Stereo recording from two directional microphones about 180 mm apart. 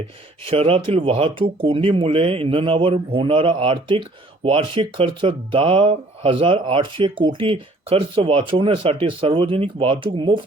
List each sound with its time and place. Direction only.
0.4 s speech: 30° right (ahead or behind)